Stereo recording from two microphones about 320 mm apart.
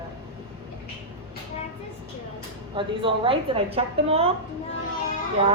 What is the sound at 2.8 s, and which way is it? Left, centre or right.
A woman's voice, centre.